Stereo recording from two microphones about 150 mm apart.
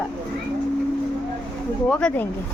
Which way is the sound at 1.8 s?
5° left (ahead or behind).